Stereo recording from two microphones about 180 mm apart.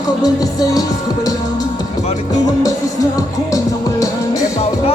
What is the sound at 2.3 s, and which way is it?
Music, 20° left (ahead or behind).